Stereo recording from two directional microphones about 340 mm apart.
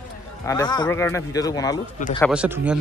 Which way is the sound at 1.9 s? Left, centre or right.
Left.